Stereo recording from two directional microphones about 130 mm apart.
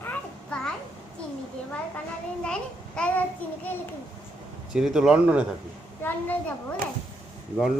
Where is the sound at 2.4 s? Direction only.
5° left (ahead or behind).